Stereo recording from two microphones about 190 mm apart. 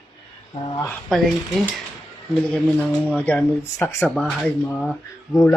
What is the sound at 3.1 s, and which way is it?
Speech, 5° left (ahead or behind).